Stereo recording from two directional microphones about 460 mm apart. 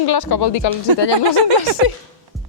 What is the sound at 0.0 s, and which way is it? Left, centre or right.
Speech, left.